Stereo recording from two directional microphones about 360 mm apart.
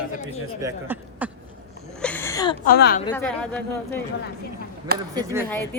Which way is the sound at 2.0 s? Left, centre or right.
Centre.